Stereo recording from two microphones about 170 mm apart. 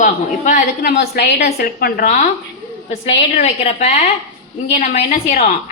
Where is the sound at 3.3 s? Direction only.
40° left (ahead or behind).